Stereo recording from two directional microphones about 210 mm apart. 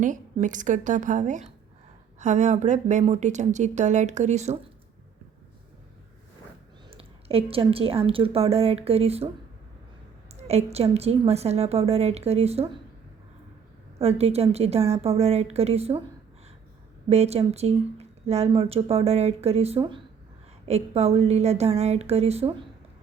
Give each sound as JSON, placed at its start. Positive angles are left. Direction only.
{"t": 0.0, "sound": "a woman's voice", "side_deg": -35}
{"t": 6.9, "sound": "speech", "side_deg": -25}
{"t": 10.3, "sound": "speech", "side_deg": -30}
{"t": 14.0, "sound": "speech", "side_deg": -30}
{"t": 17.1, "sound": "a woman's voice", "side_deg": -30}